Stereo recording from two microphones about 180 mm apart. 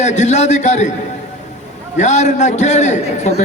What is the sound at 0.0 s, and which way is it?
Speech, 40° left (ahead or behind).